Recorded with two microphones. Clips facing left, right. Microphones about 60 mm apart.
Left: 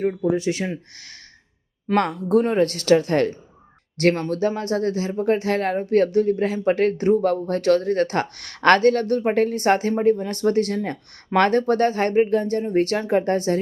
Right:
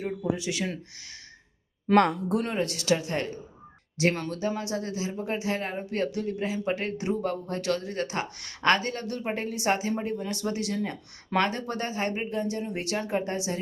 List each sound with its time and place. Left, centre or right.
0.0 s speech: left
0.3 s speech: left
1.9 s speech: centre
2.6 s speech: left